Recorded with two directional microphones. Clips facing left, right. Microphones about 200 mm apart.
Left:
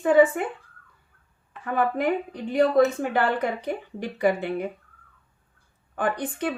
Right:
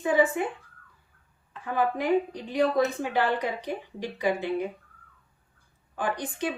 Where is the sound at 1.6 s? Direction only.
55° left (ahead or behind).